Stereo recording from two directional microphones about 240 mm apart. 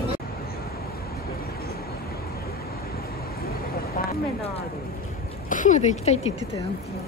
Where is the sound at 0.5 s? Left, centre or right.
Left.